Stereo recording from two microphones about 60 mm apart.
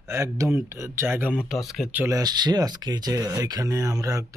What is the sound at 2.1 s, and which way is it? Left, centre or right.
Speech, right.